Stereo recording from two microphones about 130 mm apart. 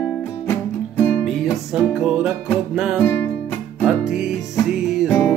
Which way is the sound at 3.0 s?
15° left (ahead or behind).